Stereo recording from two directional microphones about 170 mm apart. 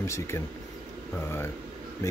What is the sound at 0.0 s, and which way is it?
Speech, 15° left (ahead or behind).